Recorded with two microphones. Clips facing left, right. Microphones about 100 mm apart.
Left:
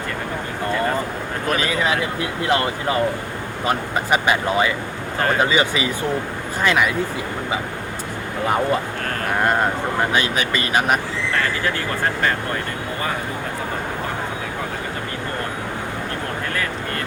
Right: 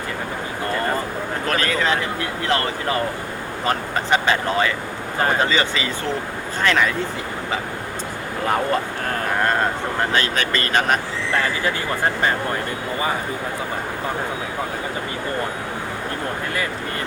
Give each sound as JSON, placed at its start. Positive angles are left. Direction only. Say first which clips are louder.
{"t": 1.5, "sound": "speech", "louder": "left 1 dB", "side_deg": 10}
{"t": 8.4, "sound": "speech", "louder": "left 1 dB", "side_deg": 5}
{"t": 10.1, "sound": "speech", "louder": "left 1 dB", "side_deg": 15}